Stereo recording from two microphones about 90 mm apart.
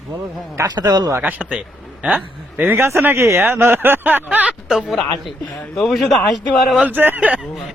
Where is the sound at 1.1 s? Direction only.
20° right (ahead or behind).